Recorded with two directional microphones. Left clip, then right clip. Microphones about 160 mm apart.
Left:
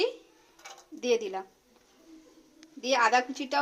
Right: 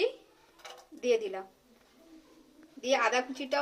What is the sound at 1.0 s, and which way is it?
Speech, 55° left (ahead or behind).